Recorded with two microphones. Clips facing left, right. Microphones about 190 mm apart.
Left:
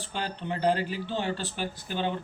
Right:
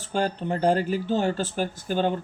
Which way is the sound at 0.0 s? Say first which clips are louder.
Right 8 dB; 45° right (ahead or behind).